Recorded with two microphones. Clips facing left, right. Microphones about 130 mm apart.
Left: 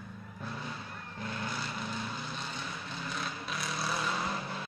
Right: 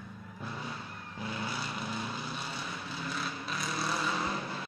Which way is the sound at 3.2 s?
Centre (ahead or behind).